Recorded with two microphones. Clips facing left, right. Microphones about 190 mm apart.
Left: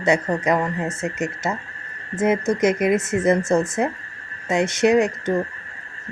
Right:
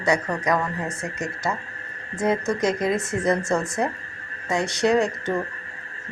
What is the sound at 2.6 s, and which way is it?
Speech, 20° left (ahead or behind).